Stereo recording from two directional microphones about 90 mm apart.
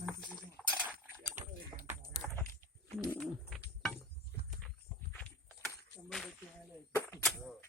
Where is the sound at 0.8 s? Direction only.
20° right (ahead or behind).